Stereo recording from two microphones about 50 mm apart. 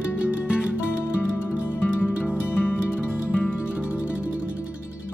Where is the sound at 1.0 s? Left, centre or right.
Left.